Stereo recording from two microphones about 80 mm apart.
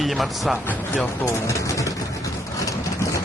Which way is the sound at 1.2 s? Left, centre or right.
Left.